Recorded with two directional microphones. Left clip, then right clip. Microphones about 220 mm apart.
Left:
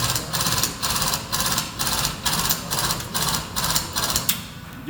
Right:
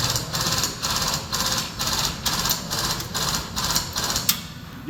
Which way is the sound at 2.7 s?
35° left (ahead or behind).